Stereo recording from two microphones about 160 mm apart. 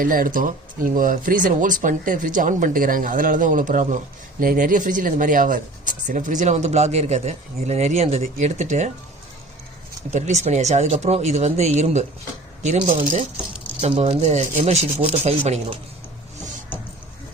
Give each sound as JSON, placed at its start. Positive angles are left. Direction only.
{"t": 0.0, "sound": "speech", "side_deg": -60}
{"t": 10.1, "sound": "speech", "side_deg": -45}
{"t": 12.8, "sound": "speech", "side_deg": -35}